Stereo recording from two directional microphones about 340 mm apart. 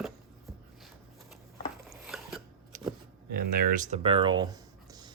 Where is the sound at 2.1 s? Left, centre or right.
Centre.